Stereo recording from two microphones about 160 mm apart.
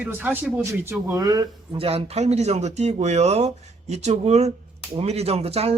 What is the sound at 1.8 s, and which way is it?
Speech, 35° right (ahead or behind).